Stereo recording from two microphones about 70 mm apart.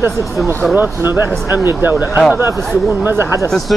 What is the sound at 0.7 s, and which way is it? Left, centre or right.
Speech, right.